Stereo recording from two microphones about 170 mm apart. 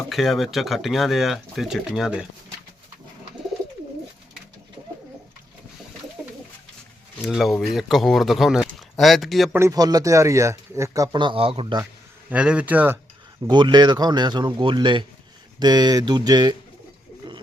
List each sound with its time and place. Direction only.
0.1 s speech: centre (ahead or behind)
7.2 s speech: centre (ahead or behind)
9.6 s speech: 20° right (ahead or behind)
12.3 s speech: 5° right (ahead or behind)
13.5 s speech: 25° right (ahead or behind)